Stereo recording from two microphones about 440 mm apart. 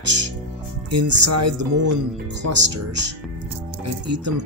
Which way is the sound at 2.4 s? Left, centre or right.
Right.